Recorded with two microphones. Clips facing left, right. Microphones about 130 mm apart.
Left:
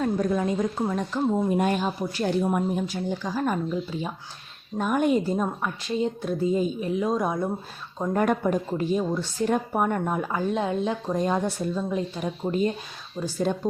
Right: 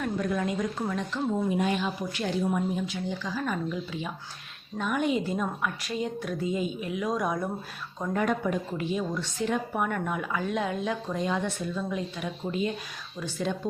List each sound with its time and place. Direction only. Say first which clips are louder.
0.0 s speech: left 4 dB; 30° left (ahead or behind)
1.5 s speech: left 3 dB; 45° left (ahead or behind)
2.4 s speech: left 3 dB; 55° left (ahead or behind); by 7.5 s 25° left (ahead or behind)
8.1 s speech: left 4 dB; 45° left (ahead or behind)